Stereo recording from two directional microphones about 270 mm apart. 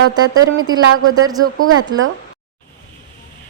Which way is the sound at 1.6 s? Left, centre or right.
Right.